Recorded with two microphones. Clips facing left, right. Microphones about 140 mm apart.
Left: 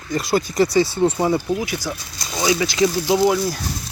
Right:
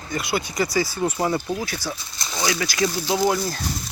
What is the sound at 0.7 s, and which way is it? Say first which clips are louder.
Speech: left 4 dB; 25° left (ahead or behind).